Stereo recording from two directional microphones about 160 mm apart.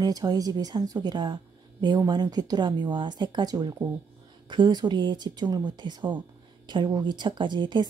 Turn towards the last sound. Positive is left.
turn(degrees=-30)  # may be behind; listen again after turning